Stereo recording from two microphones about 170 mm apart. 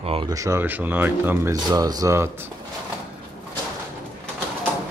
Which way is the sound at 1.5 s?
20° right (ahead or behind).